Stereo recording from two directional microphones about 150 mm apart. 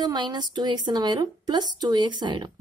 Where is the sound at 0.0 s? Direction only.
30° right (ahead or behind).